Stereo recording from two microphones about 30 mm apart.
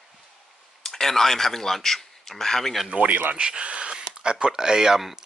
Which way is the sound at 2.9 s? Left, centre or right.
Right.